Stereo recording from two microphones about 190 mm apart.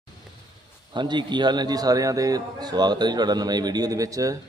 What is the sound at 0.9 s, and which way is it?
Speech, 25° right (ahead or behind).